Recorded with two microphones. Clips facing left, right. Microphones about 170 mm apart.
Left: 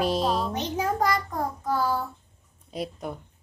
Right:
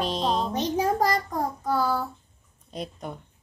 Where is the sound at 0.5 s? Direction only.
35° right (ahead or behind).